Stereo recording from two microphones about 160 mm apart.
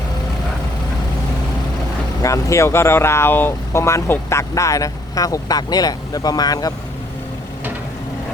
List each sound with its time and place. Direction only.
2.2 s speech: 20° left (ahead or behind)